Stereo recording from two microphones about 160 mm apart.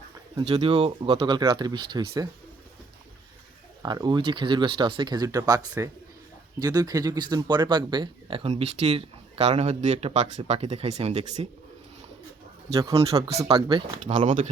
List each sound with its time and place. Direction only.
0.4 s speech: 35° right (ahead or behind)
3.8 s speech: 25° right (ahead or behind); by 11.4 s 40° right (ahead or behind)
13.1 s speech: 40° right (ahead or behind)
14.1 s speech: 50° right (ahead or behind)